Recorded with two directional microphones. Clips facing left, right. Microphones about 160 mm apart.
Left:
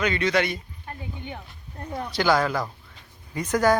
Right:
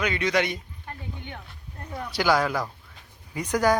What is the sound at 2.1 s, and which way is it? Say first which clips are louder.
A man's voice: left 1 dB; 10° right (ahead or behind).